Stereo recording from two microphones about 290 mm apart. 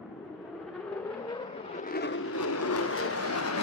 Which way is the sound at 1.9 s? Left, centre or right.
Left.